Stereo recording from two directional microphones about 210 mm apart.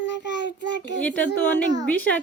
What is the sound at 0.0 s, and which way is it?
Child singing, 55° left (ahead or behind).